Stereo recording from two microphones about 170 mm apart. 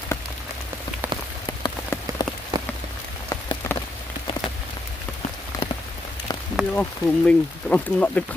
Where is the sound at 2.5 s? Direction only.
25° right (ahead or behind).